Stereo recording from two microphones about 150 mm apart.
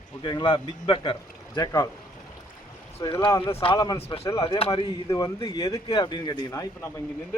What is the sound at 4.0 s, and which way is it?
Speech, 40° left (ahead or behind).